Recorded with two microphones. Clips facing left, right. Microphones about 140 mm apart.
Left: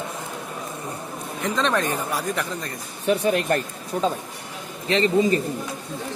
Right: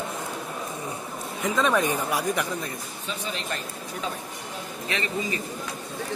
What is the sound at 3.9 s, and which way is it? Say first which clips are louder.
Speech: left 10 dB; 35° left (ahead or behind).